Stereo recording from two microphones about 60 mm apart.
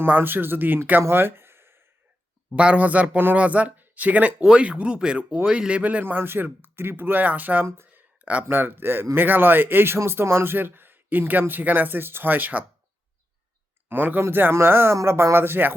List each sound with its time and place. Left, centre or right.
0.0 s speech: right
1.0 s a sound: right
2.6 s speech: right
7.9 s a sound: right
8.4 s speech: right
13.8 s speech: right